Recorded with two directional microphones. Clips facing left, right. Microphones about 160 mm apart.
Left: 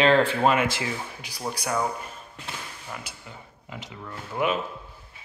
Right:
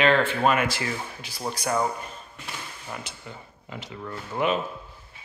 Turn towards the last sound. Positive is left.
turn(degrees=5)  # may be behind; listen again after turning